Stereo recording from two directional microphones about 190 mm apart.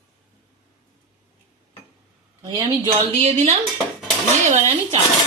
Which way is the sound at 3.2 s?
35° right (ahead or behind).